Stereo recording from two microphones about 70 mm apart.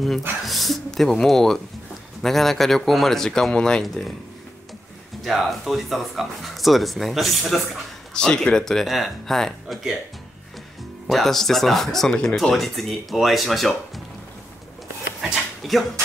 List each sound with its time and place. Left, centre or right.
0.5 s speech: centre
5.2 s speech: centre
8.1 s speech: centre
11.1 s speech: centre
12.1 s speech: centre
12.4 s speech: centre
15.3 s dog: centre